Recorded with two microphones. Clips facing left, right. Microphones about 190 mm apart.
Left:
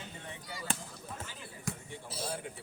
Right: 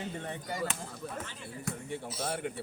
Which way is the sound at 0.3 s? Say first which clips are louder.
Right 8 dB; 55° right (ahead or behind).